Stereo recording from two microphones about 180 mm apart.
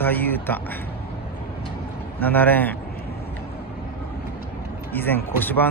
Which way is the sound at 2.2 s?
10° left (ahead or behind).